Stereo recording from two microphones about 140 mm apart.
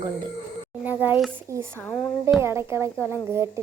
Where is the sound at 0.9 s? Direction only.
15° right (ahead or behind).